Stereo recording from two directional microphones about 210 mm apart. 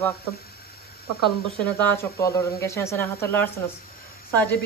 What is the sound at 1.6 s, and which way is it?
Speech, 10° left (ahead or behind).